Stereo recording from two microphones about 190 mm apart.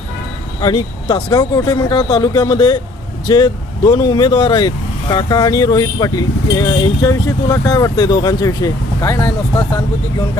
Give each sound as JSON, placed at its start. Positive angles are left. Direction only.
{"t": 0.6, "sound": "speech", "side_deg": 20}